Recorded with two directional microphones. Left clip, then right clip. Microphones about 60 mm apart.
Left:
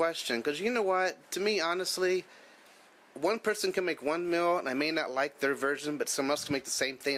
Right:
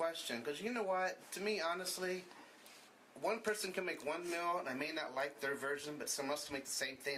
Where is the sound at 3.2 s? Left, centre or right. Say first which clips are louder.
Left 9 dB; left.